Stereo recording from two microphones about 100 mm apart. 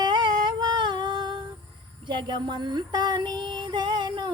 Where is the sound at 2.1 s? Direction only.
50° right (ahead or behind).